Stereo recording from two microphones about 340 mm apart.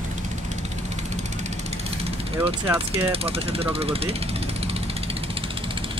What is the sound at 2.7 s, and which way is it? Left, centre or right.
Speech, centre.